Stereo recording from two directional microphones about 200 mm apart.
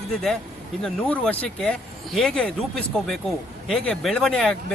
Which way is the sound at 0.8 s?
5° left (ahead or behind).